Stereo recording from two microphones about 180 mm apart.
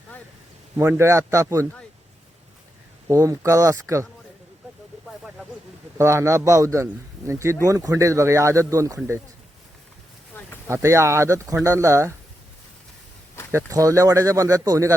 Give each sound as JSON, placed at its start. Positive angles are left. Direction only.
{"t": 0.8, "sound": "a man's voice", "side_deg": -15}
{"t": 3.1, "sound": "a man's voice", "side_deg": -20}
{"t": 6.0, "sound": "a man's voice", "side_deg": -15}
{"t": 10.3, "sound": "a sound", "side_deg": 10}
{"t": 10.7, "sound": "a man's voice", "side_deg": -15}
{"t": 13.5, "sound": "a man's voice", "side_deg": -15}